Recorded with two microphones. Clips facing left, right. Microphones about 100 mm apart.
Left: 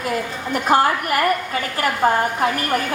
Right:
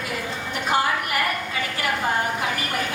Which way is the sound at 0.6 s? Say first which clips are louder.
Left 5 dB; 45° left (ahead or behind).